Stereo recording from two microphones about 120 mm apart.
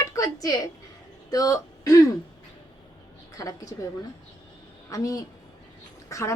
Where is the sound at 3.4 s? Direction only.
25° left (ahead or behind).